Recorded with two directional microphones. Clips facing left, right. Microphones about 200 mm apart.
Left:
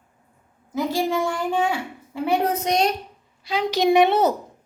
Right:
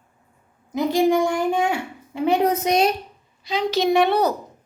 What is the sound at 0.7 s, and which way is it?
A child's voice, 20° right (ahead or behind).